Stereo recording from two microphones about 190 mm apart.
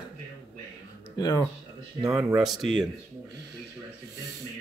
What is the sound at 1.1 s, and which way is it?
Speech, 20° left (ahead or behind).